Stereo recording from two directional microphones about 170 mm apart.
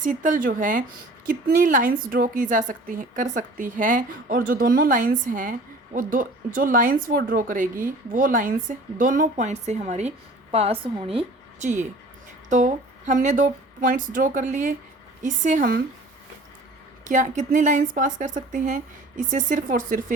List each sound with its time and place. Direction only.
0.0 s a woman's voice: 50° right (ahead or behind); by 11.3 s 30° right (ahead or behind)
11.6 s a woman's voice: 45° right (ahead or behind)
17.0 s a woman's voice: 45° right (ahead or behind)